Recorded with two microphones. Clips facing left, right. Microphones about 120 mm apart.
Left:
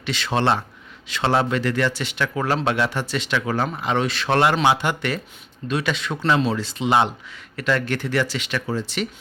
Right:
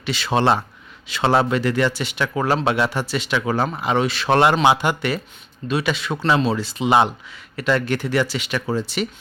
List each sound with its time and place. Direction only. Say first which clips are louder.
0.0 s speech: right 2 dB; 5° right (ahead or behind)
4.3 s speech: right 3 dB; 20° right (ahead or behind)